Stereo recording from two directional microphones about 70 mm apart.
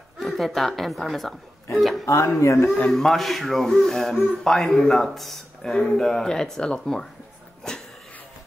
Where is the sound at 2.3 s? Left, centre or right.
Left.